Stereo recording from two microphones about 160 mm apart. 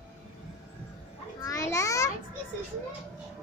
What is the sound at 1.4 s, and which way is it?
Children playing, 20° left (ahead or behind).